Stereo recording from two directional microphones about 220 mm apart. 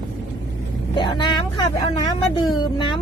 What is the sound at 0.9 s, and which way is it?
Cat, 20° left (ahead or behind).